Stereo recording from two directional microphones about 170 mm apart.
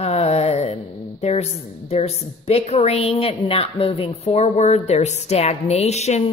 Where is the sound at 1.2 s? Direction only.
40° left (ahead or behind).